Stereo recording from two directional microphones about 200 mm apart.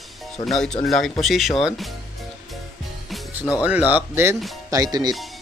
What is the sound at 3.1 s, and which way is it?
Speech, 5° right (ahead or behind).